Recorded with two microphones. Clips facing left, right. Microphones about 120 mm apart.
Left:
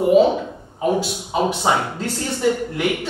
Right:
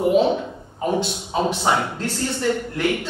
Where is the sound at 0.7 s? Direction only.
5° left (ahead or behind).